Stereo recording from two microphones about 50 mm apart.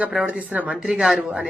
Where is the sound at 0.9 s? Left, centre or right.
Centre.